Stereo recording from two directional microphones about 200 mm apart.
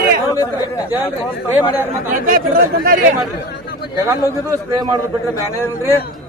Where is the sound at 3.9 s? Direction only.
15° right (ahead or behind).